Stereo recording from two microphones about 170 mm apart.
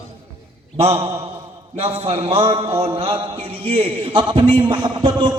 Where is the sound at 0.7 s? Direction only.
35° right (ahead or behind).